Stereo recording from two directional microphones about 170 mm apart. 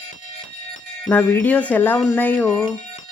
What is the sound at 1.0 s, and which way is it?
Speech, 10° left (ahead or behind).